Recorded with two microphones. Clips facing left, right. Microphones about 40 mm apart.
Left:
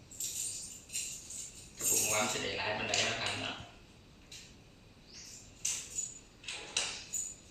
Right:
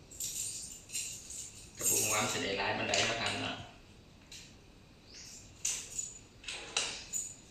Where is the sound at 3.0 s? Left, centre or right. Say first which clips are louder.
Right 1 dB; centre.